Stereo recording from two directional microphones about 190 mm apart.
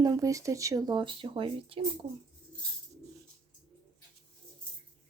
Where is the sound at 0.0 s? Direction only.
20° right (ahead or behind).